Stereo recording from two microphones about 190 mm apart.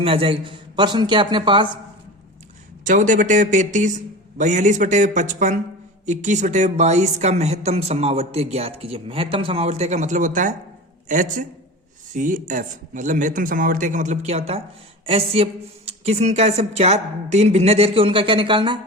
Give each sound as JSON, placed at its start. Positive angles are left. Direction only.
{"t": 0.0, "sound": "a man's voice", "side_deg": -30}
{"t": 2.8, "sound": "a woman's voice", "side_deg": -40}